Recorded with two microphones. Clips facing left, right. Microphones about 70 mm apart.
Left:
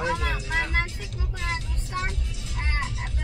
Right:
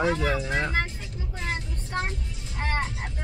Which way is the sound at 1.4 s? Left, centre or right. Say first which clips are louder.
Even; right.